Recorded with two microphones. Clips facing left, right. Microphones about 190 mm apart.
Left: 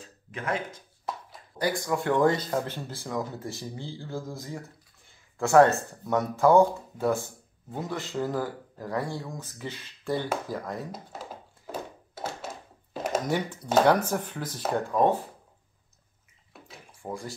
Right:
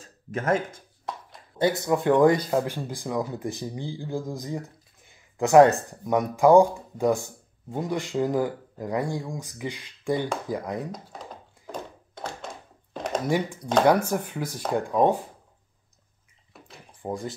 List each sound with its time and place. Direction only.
0.0 s speech: 45° right (ahead or behind)
1.1 s a sound: centre (ahead or behind)
1.6 s speech: 25° right (ahead or behind)
10.9 s a sound: 5° left (ahead or behind)
13.2 s speech: 10° right (ahead or behind)
16.5 s bathtub: centre (ahead or behind)
17.0 s speech: 20° right (ahead or behind)